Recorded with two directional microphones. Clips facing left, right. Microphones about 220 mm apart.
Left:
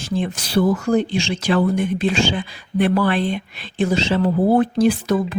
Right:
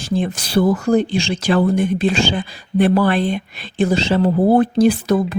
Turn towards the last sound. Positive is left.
turn(degrees=-35)  # may be behind; listen again after turning